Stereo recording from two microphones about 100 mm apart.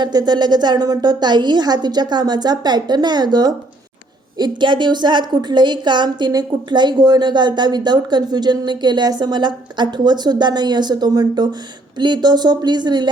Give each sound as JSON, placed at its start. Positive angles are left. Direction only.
{"t": 0.0, "sound": "a woman's voice", "side_deg": -45}